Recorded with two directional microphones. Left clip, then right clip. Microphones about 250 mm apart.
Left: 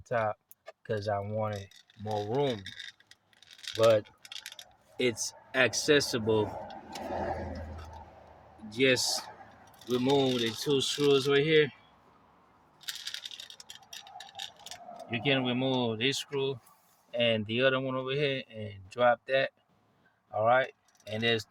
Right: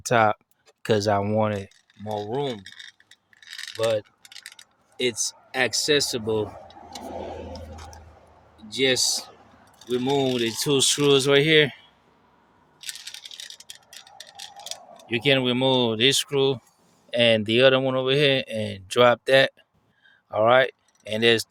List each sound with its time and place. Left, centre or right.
0.0 s speech: right
2.4 s speech: centre
3.5 s mechanisms: centre
4.3 s a sound: centre
4.9 s speech: centre
8.7 s speech: centre
10.3 s speech: right
12.9 s a sound: centre
14.0 s tick-tock: centre
15.0 s speech: right